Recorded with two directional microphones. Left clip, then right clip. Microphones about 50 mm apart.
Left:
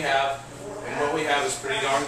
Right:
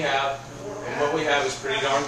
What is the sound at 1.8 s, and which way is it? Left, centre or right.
Speech, centre.